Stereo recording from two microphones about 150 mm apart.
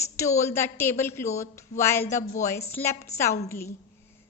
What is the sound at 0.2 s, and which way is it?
A woman's voice, 20° left (ahead or behind).